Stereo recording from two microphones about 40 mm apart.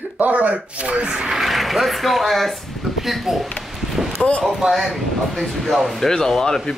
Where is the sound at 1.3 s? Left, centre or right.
Centre.